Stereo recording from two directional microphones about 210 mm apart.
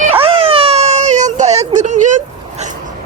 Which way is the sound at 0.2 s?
25° right (ahead or behind).